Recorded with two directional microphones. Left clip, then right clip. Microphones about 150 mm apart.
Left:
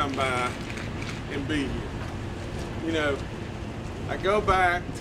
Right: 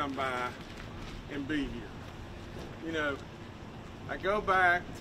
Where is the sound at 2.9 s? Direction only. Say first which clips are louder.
Left 7 dB; 10° left (ahead or behind).